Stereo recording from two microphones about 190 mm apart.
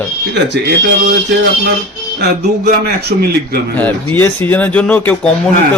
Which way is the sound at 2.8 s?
55° right (ahead or behind).